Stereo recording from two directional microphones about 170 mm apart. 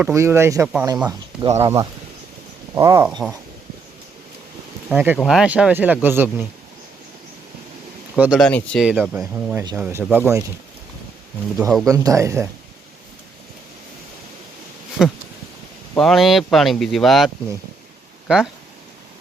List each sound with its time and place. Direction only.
0.0 s speech: 15° right (ahead or behind)
3.1 s speech: centre (ahead or behind)
4.9 s speech: 5° right (ahead or behind)
8.1 s speech: 5° right (ahead or behind)
11.9 s speech: 20° right (ahead or behind)
15.0 s speech: 5° right (ahead or behind)